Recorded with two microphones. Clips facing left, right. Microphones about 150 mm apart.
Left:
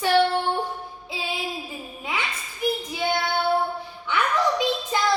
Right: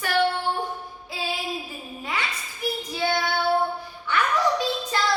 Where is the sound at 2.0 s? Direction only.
20° left (ahead or behind).